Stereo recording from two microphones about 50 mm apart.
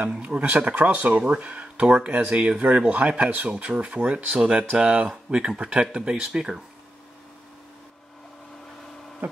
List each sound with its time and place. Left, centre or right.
0.2 s speech: right; by 6.6 s centre